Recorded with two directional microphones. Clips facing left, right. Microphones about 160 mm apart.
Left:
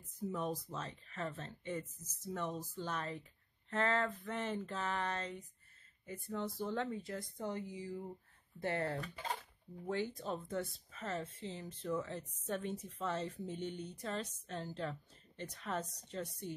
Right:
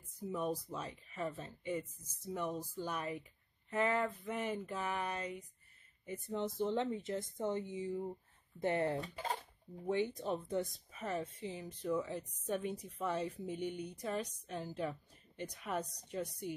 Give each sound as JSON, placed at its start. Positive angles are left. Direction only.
{"t": 0.3, "sound": "a woman's voice", "side_deg": -10}
{"t": 9.1, "sound": "speech", "side_deg": -35}
{"t": 9.8, "sound": "a woman's voice", "side_deg": -20}